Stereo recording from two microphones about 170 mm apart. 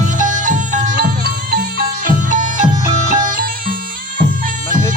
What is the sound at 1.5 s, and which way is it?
Music, 60° right (ahead or behind).